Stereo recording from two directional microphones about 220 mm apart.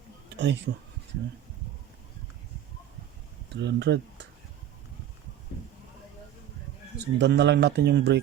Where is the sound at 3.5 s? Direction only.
50° right (ahead or behind).